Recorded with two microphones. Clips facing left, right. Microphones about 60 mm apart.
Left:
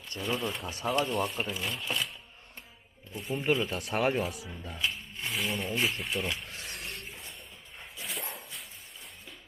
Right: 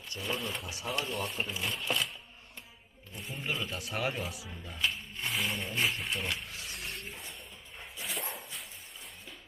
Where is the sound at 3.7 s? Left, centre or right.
Left.